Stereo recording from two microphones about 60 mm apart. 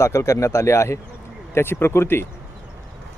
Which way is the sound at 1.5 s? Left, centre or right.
Left.